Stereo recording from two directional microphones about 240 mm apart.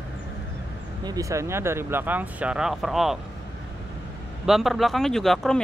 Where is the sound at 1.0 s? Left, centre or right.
Centre.